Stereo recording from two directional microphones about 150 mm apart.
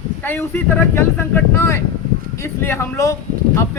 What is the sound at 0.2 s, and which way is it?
Speech, 15° left (ahead or behind).